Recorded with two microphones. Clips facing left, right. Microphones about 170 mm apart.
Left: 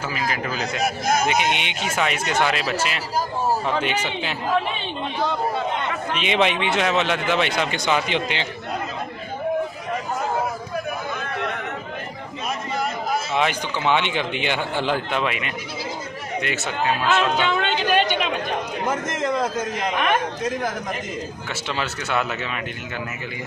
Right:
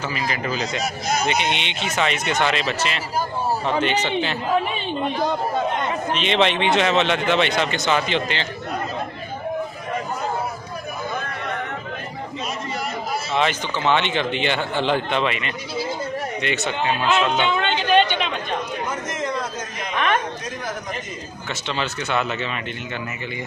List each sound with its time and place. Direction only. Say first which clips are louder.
0.1 s speech: right 1 dB; 5° left (ahead or behind)
1.0 s speech: left 1 dB; 50° left (ahead or behind)
1.9 s speech: right 1 dB; 5° left (ahead or behind)
6.1 s speech: right 1 dB; 10° left (ahead or behind)
13.3 s speech: right 4 dB; 10° left (ahead or behind)
17.4 s music: even; 5° left (ahead or behind)
18.9 s a sound: left 3 dB; 90° left
21.7 s speech: right 1 dB; 5° left (ahead or behind)